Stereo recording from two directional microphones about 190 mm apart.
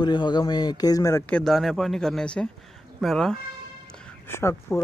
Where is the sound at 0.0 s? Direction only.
25° left (ahead or behind).